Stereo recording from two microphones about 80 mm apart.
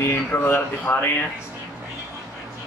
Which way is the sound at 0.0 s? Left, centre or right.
Left.